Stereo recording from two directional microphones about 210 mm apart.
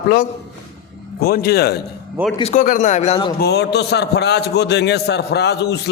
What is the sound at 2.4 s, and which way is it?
Speech, 35° left (ahead or behind).